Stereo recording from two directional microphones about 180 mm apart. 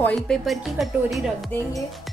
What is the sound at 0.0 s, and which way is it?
Speech, 5° left (ahead or behind).